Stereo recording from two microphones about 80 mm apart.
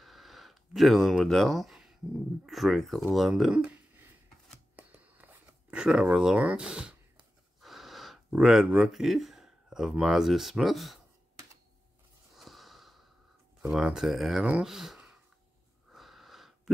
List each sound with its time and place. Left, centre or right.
0.0 s a sound: centre
2.4 s speech: centre
4.7 s a sound: right
5.8 s speech: centre
7.6 s speech: centre
12.4 s snort: centre
13.7 s speech: centre
14.4 s speech: centre
14.7 s speech: centre
15.9 s wheeze: centre